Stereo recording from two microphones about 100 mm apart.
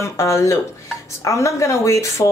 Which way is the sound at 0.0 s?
30° left (ahead or behind).